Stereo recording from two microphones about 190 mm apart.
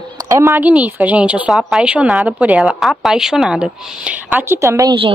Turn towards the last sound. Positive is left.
turn(degrees=-25)  # may be behind; listen again after turning